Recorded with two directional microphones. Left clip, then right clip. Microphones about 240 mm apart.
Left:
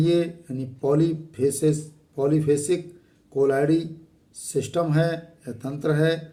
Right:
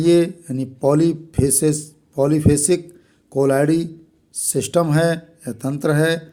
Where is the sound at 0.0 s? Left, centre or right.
Right.